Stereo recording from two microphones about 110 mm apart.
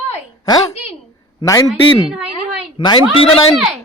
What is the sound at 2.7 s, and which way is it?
Speech, 50° left (ahead or behind).